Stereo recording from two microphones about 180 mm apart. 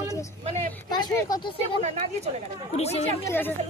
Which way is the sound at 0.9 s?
20° left (ahead or behind).